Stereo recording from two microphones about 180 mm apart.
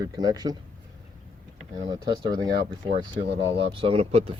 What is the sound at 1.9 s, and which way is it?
Speech, 25° right (ahead or behind).